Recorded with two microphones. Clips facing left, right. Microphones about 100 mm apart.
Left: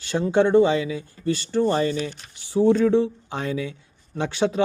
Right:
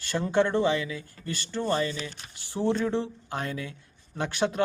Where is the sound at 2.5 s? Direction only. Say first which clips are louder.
Left 9 dB; 15° left (ahead or behind).